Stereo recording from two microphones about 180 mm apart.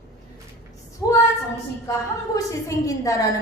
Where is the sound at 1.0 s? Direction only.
20° left (ahead or behind).